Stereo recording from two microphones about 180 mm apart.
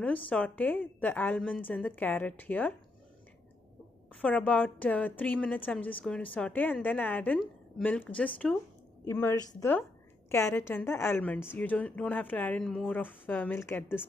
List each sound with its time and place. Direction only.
0.0 s a woman's voice: 10° left (ahead or behind)
4.2 s a woman's voice: 10° left (ahead or behind)